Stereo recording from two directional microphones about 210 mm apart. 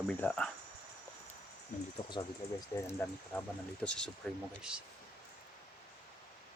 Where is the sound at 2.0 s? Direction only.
25° left (ahead or behind).